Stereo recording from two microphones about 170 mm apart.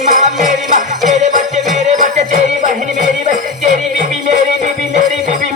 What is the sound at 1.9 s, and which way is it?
Music, 45° right (ahead or behind).